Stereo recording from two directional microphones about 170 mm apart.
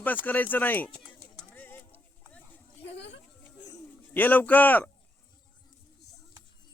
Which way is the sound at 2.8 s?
90° left.